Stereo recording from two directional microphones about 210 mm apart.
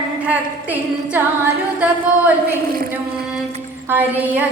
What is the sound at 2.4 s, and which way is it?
Speech, 45° right (ahead or behind).